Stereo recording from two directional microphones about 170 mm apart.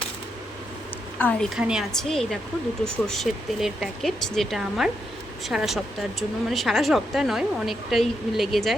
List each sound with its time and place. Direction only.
1.2 s speech: 10° left (ahead or behind)
1.5 s speech: 5° right (ahead or behind)